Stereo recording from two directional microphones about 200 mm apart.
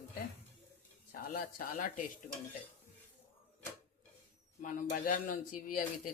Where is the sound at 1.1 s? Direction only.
45° left (ahead or behind).